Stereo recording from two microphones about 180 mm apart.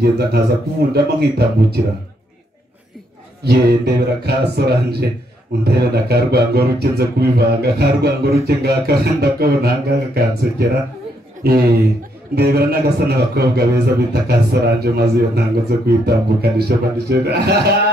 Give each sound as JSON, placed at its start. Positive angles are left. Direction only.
{"t": 0.0, "sound": "a man's voice", "side_deg": -60}
{"t": 3.4, "sound": "a man's voice", "side_deg": -70}